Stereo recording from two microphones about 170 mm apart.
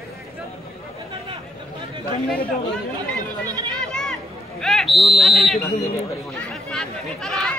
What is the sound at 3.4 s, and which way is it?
Chatter, 25° right (ahead or behind).